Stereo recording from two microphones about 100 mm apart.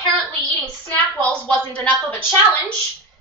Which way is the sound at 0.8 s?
15° left (ahead or behind).